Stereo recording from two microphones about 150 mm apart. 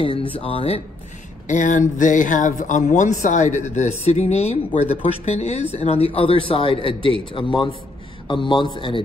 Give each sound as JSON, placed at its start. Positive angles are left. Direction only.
{"t": 0.0, "sound": "speech", "side_deg": 35}
{"t": 1.5, "sound": "speech", "side_deg": 55}